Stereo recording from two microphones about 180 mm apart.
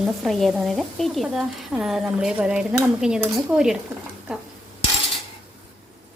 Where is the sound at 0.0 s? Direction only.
Centre (ahead or behind).